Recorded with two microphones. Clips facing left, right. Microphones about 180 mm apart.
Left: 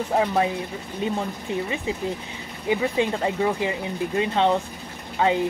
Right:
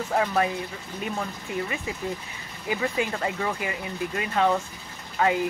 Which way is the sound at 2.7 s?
25° left (ahead or behind).